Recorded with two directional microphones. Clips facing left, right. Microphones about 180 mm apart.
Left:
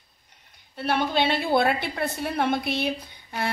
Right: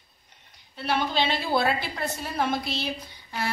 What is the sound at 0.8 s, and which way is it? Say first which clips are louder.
A woman's voice: left 2 dB; 55° left (ahead or behind).